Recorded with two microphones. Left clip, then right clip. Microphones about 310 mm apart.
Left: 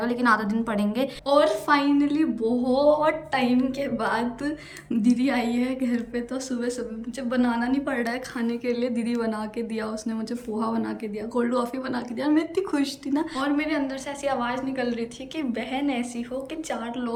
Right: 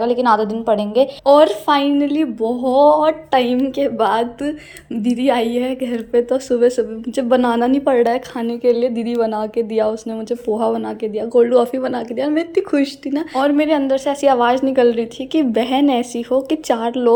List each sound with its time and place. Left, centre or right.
0.0 s a woman's voice: centre